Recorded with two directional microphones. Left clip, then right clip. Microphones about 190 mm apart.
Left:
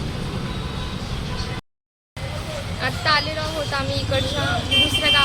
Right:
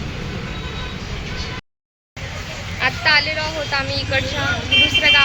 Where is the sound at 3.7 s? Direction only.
10° left (ahead or behind).